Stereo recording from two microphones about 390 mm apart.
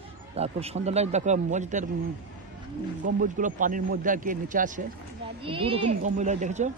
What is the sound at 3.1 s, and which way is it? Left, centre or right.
Speech, centre.